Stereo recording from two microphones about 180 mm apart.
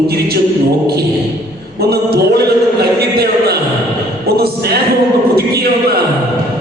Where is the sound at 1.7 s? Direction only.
60° right (ahead or behind).